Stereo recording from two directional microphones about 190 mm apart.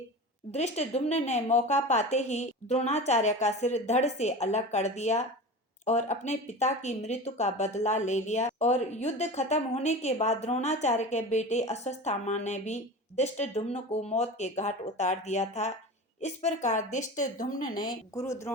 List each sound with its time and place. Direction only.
0.5 s speech: 35° left (ahead or behind)
18.1 s speech: 15° left (ahead or behind)